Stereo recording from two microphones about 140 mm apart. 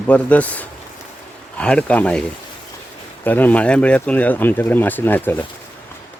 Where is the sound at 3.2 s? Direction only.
10° left (ahead or behind).